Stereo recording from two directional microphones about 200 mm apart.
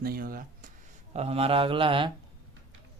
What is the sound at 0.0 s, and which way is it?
Speech, 50° right (ahead or behind).